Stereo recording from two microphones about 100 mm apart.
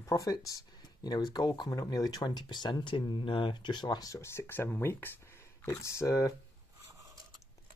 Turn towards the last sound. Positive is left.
turn(degrees=30)  # may be behind; listen again after turning